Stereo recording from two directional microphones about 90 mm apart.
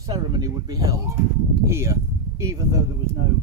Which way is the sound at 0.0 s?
40° right (ahead or behind).